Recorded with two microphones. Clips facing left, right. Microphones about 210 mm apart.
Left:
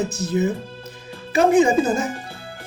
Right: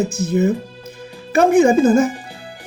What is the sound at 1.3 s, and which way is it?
Speech, 50° right (ahead or behind).